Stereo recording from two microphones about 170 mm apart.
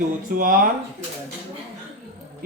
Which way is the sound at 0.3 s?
55° right (ahead or behind).